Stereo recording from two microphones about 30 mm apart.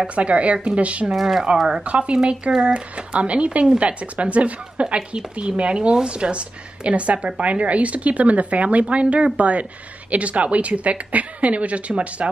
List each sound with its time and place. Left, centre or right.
0.1 s speech: right
1.1 s a woman's voice: centre
1.9 s a woman's voice: right
4.8 s a woman's voice: right